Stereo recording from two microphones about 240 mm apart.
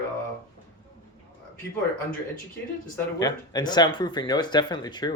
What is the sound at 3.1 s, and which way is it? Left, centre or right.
Speech, centre.